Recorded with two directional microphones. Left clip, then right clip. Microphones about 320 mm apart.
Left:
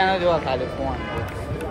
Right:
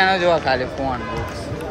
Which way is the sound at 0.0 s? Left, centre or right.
Centre.